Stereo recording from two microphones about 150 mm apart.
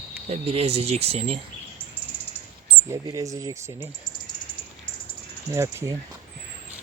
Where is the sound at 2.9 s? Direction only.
20° right (ahead or behind).